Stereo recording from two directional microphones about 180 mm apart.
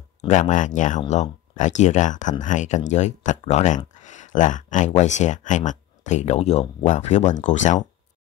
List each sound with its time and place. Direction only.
0.3 s speech: 45° left (ahead or behind)